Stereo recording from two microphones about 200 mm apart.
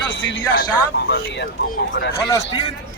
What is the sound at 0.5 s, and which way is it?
Speech, 55° left (ahead or behind).